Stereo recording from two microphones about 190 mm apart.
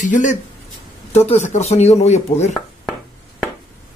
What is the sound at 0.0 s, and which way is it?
Speech, 40° left (ahead or behind).